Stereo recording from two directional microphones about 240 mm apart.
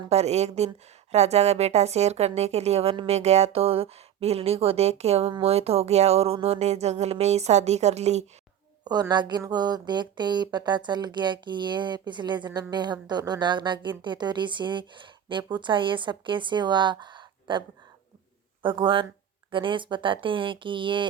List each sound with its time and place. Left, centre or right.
0.1 s a woman's voice: right
8.8 s a woman's voice: centre
18.6 s a woman's voice: right